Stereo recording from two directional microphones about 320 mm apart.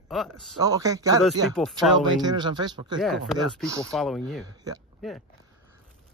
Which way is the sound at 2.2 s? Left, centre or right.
Centre.